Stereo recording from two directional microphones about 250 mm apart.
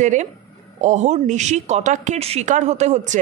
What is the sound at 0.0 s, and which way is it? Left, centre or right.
A woman's voice, right.